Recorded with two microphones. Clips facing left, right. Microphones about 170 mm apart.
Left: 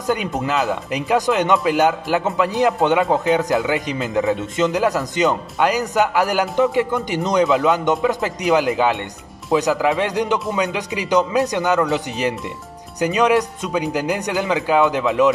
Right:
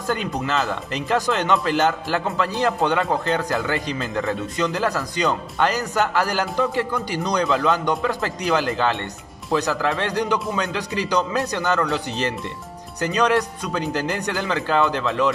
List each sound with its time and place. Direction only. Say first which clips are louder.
0.0 s speech: left 3 dB; 15° left (ahead or behind)